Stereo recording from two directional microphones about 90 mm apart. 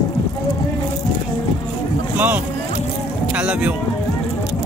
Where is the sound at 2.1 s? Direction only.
20° right (ahead or behind).